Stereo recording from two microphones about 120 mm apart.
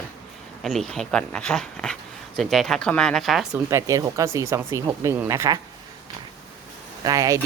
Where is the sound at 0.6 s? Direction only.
5° left (ahead or behind).